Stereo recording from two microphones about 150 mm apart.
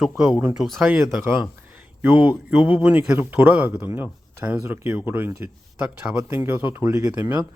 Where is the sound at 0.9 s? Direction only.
15° right (ahead or behind).